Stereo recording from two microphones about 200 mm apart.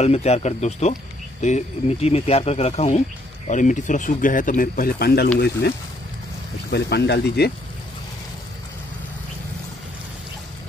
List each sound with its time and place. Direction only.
0.0 s speech: 30° left (ahead or behind); by 7.5 s 55° left (ahead or behind)